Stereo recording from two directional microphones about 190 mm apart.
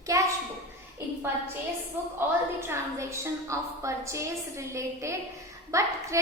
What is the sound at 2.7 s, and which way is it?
A woman's voice, 15° right (ahead or behind).